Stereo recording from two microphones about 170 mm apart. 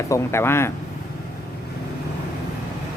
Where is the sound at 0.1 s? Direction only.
15° left (ahead or behind).